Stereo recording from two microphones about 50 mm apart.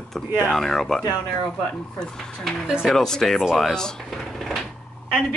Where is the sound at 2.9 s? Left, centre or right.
Centre.